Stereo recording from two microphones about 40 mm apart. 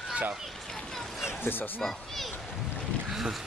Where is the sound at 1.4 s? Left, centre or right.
Left.